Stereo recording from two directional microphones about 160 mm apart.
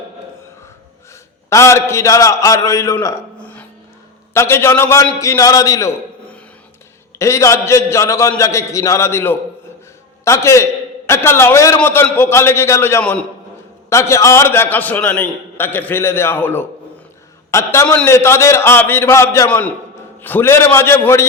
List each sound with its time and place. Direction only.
1.5 s a man's voice: 15° left (ahead or behind)
4.4 s a man's voice: 15° left (ahead or behind)
7.2 s a man's voice: 20° left (ahead or behind)